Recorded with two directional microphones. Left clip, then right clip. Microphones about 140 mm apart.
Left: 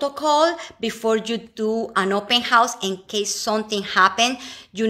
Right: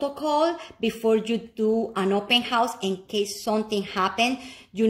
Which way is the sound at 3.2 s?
10° right (ahead or behind).